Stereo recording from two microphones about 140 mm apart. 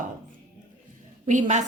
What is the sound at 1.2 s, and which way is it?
Speech, 65° right (ahead or behind).